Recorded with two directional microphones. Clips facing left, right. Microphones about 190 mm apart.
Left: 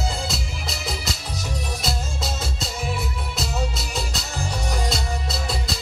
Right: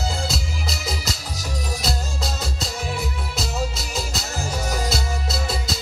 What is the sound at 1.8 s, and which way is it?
Music, centre (ahead or behind).